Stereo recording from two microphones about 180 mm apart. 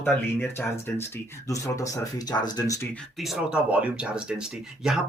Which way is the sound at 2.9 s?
Centre (ahead or behind).